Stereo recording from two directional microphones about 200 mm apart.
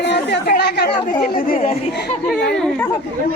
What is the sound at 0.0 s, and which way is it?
Speech, 60° left (ahead or behind).